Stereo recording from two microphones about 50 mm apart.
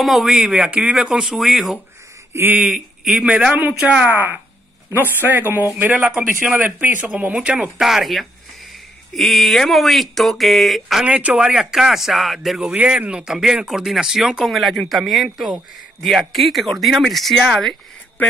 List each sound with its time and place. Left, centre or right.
0.0 s speech: centre
0.3 s speech: centre
2.3 s speech: right
2.7 s a man's voice: centre
3.5 s a man's voice: right
5.9 s speech: centre
6.2 s a man's voice: right
7.3 s speech: centre
7.8 s speech: centre
11.1 s speech: right
11.3 s speech: centre
14.4 s speech: centre
18.2 s a sound: left